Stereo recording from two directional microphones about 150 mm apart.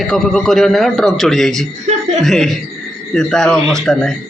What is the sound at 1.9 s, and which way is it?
Chuckle, 50° right (ahead or behind).